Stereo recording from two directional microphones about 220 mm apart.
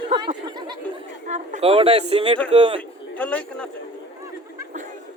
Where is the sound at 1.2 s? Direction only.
35° right (ahead or behind).